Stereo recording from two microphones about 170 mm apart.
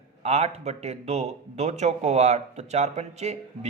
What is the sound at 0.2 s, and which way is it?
A man's voice, 40° right (ahead or behind).